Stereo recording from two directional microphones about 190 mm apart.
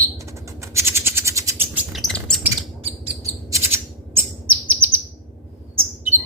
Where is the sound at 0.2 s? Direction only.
15° right (ahead or behind).